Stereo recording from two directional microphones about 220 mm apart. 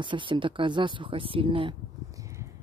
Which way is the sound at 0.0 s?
20° right (ahead or behind).